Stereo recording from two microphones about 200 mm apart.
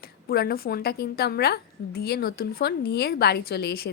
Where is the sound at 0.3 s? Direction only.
50° left (ahead or behind).